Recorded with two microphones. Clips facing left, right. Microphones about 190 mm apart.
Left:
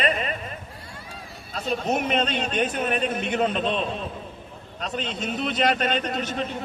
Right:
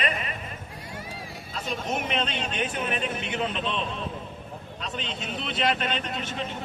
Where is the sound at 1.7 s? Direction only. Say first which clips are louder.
Left 6 dB; 40° left (ahead or behind).